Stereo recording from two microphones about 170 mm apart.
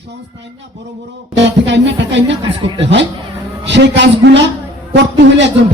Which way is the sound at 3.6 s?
90° right.